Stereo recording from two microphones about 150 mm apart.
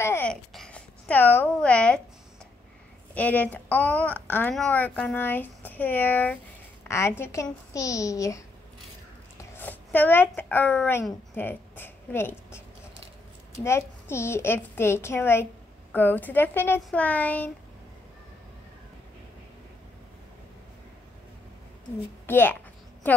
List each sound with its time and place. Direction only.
0.0 s babbling: 15° left (ahead or behind)
0.3 s a sound: 5° left (ahead or behind)
3.2 s a child's voice: 10° left (ahead or behind)
9.4 s speech: 10° left (ahead or behind)
13.7 s speech: 15° left (ahead or behind)
22.2 s a child's voice: 15° left (ahead or behind)